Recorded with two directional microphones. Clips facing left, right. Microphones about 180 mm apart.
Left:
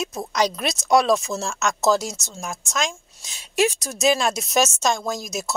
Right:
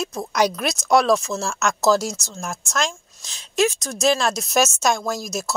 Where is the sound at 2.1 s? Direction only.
20° left (ahead or behind).